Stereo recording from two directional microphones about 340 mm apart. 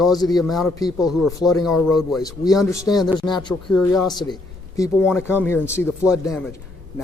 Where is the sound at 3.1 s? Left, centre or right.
Centre.